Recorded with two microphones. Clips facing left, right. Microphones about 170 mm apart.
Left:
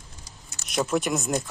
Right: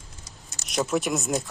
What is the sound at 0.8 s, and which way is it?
Speech, centre (ahead or behind).